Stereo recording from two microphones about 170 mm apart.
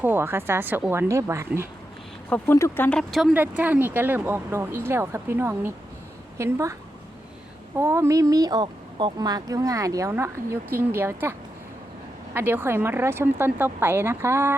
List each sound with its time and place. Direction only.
0.0 s speech: 15° right (ahead or behind)
2.3 s speech: 15° left (ahead or behind)
3.3 s speech: 10° right (ahead or behind)
7.8 s speech: 15° right (ahead or behind)